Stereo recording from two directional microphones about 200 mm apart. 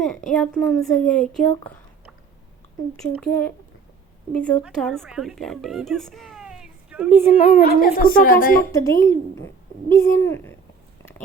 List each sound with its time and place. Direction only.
0.3 s a woman's voice: centre (ahead or behind)
3.2 s a child's voice: 5° left (ahead or behind)
7.6 s a woman's voice: 45° left (ahead or behind)
8.7 s speech: 15° left (ahead or behind)